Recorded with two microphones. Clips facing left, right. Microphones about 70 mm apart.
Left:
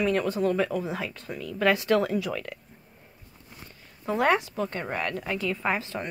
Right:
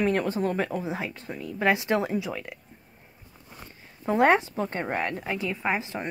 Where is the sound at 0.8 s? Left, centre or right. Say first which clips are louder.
Even; right.